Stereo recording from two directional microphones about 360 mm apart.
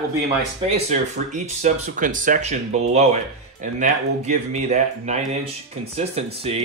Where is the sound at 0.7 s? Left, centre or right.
Centre.